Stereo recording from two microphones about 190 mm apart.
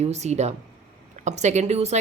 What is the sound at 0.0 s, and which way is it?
A woman's voice, 35° right (ahead or behind).